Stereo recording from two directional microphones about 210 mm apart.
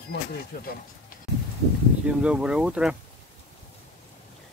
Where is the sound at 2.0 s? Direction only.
5° right (ahead or behind).